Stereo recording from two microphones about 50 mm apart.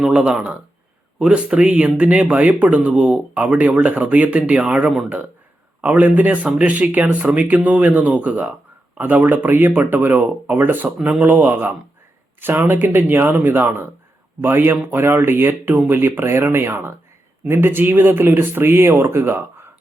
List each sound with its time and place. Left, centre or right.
0.1 s speech: centre
3.4 s speech: right